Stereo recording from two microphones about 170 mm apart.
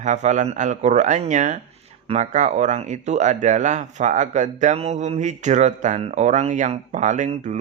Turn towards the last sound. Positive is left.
turn(degrees=-45)  # may be behind; listen again after turning